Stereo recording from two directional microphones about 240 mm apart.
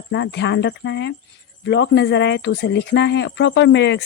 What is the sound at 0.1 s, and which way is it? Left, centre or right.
Speech, left.